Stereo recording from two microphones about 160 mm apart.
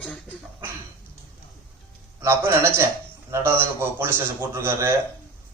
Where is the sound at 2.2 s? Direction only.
15° right (ahead or behind).